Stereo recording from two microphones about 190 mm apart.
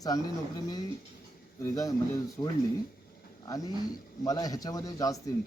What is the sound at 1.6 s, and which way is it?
Speech, 20° left (ahead or behind).